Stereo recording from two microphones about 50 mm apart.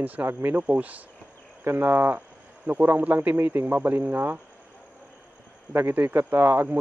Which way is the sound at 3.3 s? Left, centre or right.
Right.